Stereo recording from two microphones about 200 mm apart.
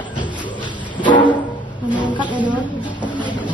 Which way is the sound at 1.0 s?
25° left (ahead or behind).